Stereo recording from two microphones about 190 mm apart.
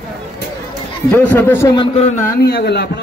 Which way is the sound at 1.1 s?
10° left (ahead or behind).